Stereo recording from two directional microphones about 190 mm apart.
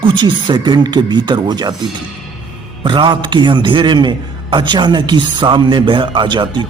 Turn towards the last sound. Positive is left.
turn(degrees=-25)  # may be behind; listen again after turning